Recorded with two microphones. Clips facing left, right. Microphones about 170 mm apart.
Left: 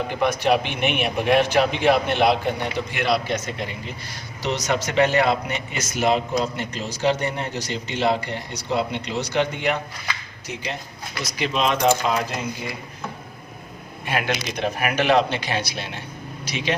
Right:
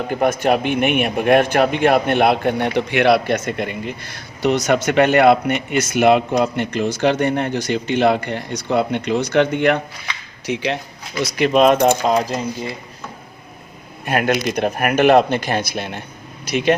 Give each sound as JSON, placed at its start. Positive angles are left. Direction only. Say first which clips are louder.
{"t": 0.1, "sound": "a man's voice", "louder": "right 4 dB", "side_deg": -45}
{"t": 10.4, "sound": "speech", "louder": "right 10 dB", "side_deg": -70}
{"t": 11.2, "sound": "speech", "louder": "right 10 dB", "side_deg": -60}
{"t": 14.0, "sound": "speech", "louder": "right 7 dB", "side_deg": -50}